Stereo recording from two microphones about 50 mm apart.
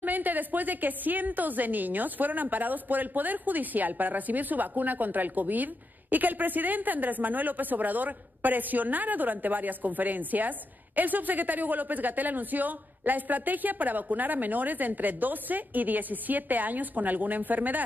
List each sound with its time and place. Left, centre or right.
0.0 s a woman's voice: right